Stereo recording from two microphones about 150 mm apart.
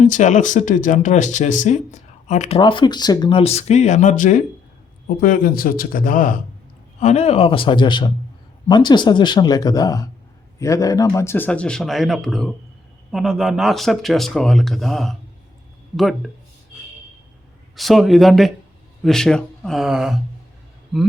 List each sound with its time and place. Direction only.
0.0 s speech: 55° left (ahead or behind)
2.6 s speech: 35° left (ahead or behind); by 6.4 s 65° left (ahead or behind)
7.0 s a man's voice: 45° left (ahead or behind); by 16.3 s centre (ahead or behind)
17.7 s speech: centre (ahead or behind)